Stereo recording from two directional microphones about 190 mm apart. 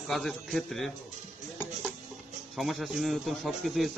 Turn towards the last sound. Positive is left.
turn(degrees=0)  # may be behind; listen again after turning